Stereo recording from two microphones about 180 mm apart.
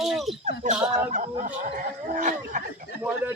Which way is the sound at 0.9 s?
40° right (ahead or behind).